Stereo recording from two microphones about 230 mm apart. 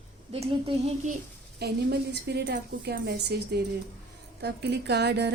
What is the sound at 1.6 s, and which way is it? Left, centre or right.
A woman's voice, right.